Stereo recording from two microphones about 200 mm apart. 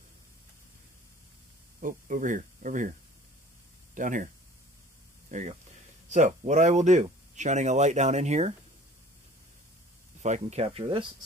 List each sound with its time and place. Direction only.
1.8 s speech: 40° right (ahead or behind)
3.9 s speech: 40° right (ahead or behind)
5.3 s speech: 35° right (ahead or behind)
10.2 s speech: 35° right (ahead or behind)